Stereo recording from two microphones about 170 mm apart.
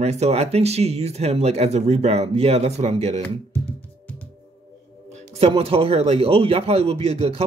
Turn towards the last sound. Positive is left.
turn(degrees=-35)  # may be behind; listen again after turning